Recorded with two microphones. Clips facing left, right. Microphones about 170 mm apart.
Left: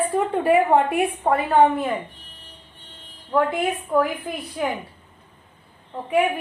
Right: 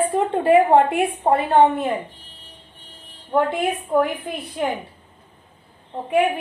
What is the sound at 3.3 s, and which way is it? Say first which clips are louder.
A woman's voice: right 1 dB; 25° right (ahead or behind).